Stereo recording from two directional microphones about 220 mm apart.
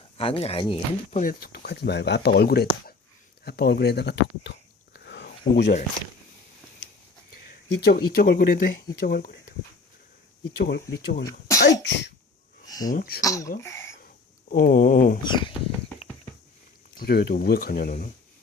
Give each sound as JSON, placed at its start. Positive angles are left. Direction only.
{"t": 0.2, "sound": "speech", "side_deg": 25}
{"t": 1.2, "sound": "speech", "side_deg": 40}
{"t": 4.9, "sound": "a sound", "side_deg": 50}
{"t": 5.5, "sound": "speech", "side_deg": 50}
{"t": 7.8, "sound": "speech", "side_deg": 45}
{"t": 10.4, "sound": "speech", "side_deg": 50}
{"t": 11.3, "sound": "speech", "side_deg": 15}
{"t": 11.8, "sound": "cough", "side_deg": 55}
{"t": 12.6, "sound": "a sound", "side_deg": 15}
{"t": 12.9, "sound": "a sound", "side_deg": 40}
{"t": 13.2, "sound": "speech", "side_deg": 15}
{"t": 14.5, "sound": "a sound", "side_deg": 40}
{"t": 15.2, "sound": "speech", "side_deg": 20}
{"t": 17.0, "sound": "speech", "side_deg": 45}